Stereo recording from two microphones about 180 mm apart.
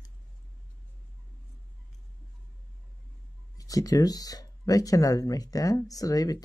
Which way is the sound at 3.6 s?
20° left (ahead or behind).